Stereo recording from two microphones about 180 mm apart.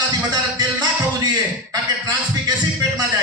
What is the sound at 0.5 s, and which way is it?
Music, 20° right (ahead or behind).